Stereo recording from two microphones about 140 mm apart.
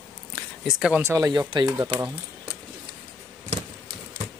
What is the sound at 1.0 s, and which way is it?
Speech, 20° right (ahead or behind).